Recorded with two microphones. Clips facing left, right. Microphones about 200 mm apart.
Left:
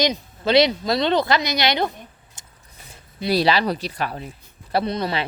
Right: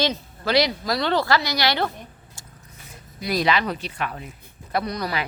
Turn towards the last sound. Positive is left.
turn(degrees=25)  # may be behind; listen again after turning